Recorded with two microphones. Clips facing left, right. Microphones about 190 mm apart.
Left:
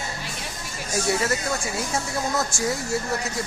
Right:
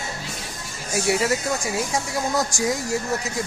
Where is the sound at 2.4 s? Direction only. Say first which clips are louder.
Right 2 dB; 15° right (ahead or behind).